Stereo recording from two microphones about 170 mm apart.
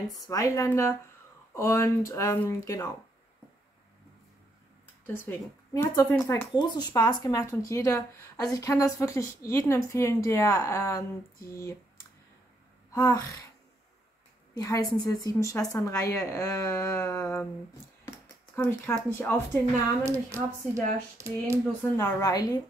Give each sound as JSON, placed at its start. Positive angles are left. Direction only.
{"t": 0.3, "sound": "speech", "side_deg": 20}
{"t": 5.0, "sound": "a woman's voice", "side_deg": 10}
{"t": 12.9, "sound": "a woman's voice", "side_deg": 20}
{"t": 14.6, "sound": "a woman's voice", "side_deg": 20}
{"t": 18.6, "sound": "speech", "side_deg": 15}
{"t": 20.1, "sound": "speech", "side_deg": -15}
{"t": 21.9, "sound": "a woman's voice", "side_deg": 20}